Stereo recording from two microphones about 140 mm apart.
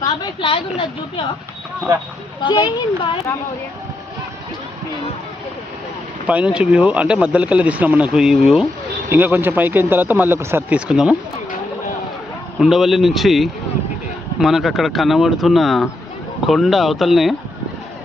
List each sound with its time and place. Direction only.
0.0 s a woman's voice: 40° left (ahead or behind)
2.4 s speech: 35° left (ahead or behind)
6.2 s speech: 10° right (ahead or behind)
9.0 s speech: 15° right (ahead or behind)
12.5 s speech: centre (ahead or behind)